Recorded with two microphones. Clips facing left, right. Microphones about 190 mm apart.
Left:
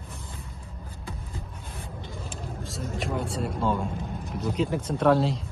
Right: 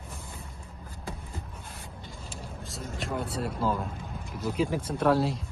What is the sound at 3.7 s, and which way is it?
Speech, centre (ahead or behind).